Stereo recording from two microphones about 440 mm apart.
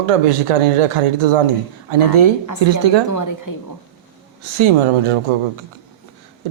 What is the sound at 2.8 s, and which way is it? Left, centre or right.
Speech, right.